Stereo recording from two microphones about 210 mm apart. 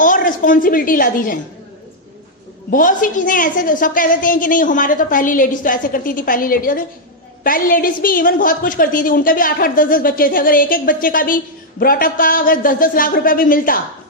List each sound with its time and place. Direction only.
0.0 s a woman's voice: 40° left (ahead or behind)
2.6 s a woman's voice: 40° left (ahead or behind)